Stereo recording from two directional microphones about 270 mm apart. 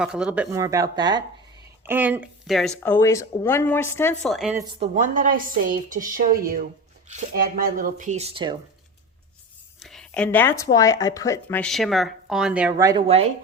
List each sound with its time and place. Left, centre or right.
0.0 s speech: centre
4.9 s a woman's voice: right
9.8 s speech: centre; by 13.3 s right